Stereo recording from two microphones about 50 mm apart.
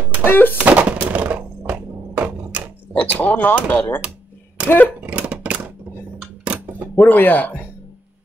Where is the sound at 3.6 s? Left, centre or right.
Left.